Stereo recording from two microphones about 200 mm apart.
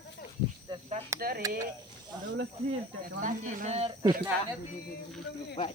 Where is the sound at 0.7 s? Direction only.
20° right (ahead or behind).